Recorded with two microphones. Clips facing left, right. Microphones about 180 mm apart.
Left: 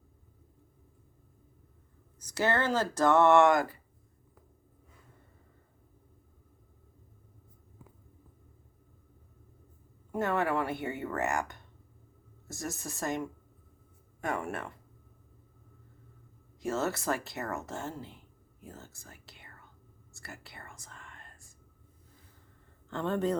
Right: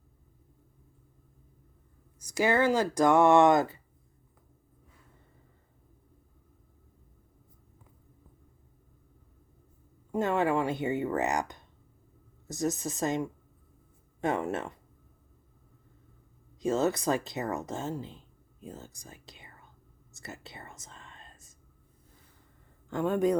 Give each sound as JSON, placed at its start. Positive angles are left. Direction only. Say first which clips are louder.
{"t": 2.1, "sound": "speech", "louder": "right 3 dB", "side_deg": -10}
{"t": 10.1, "sound": "speech", "louder": "right 3 dB", "side_deg": -20}
{"t": 16.6, "sound": "speech", "louder": "right 5 dB", "side_deg": -20}
{"t": 20.1, "sound": "whispering", "louder": "right 4 dB", "side_deg": -20}
{"t": 22.9, "sound": "speech", "louder": "right 4 dB", "side_deg": -10}